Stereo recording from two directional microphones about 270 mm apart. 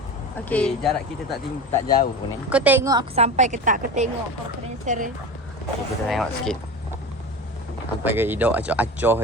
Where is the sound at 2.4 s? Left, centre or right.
Centre; by 5.1 s right.